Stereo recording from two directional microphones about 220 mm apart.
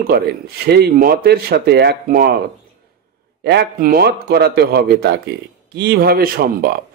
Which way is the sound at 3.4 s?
45° right (ahead or behind).